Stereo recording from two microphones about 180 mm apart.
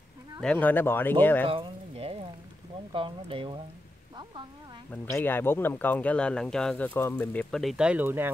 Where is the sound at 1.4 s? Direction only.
30° right (ahead or behind).